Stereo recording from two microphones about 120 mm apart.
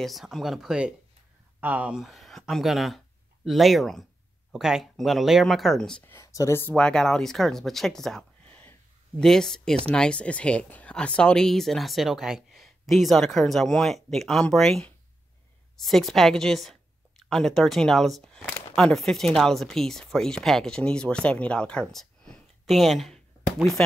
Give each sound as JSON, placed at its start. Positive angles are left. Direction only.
{"t": 0.0, "sound": "speech", "side_deg": 0}
{"t": 6.0, "sound": "speech", "side_deg": 25}
{"t": 6.8, "sound": "speech", "side_deg": 5}